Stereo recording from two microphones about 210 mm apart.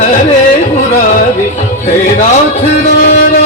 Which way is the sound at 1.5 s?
35° left (ahead or behind).